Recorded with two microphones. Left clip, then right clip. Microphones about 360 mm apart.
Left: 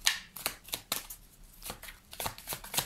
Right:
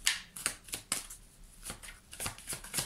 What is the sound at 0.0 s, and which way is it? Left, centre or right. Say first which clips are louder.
Shuffling cards: left 2 dB; centre.